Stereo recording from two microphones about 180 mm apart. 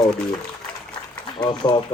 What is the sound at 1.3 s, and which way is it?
Speech, 25° left (ahead or behind).